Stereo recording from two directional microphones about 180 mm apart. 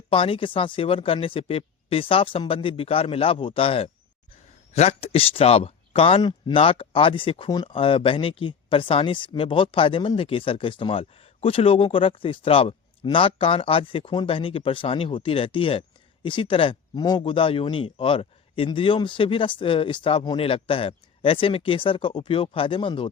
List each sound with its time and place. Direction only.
0.1 s speech: 30° left (ahead or behind)